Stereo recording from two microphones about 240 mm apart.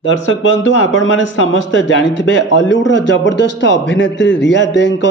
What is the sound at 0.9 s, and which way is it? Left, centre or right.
A man's voice, left.